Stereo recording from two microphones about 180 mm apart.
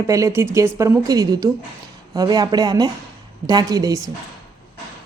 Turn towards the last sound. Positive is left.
turn(degrees=-20)  # may be behind; listen again after turning